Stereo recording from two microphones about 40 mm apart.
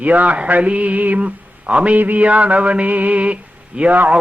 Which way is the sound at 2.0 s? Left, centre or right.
Right.